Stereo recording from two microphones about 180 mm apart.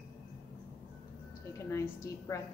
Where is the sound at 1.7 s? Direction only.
15° left (ahead or behind).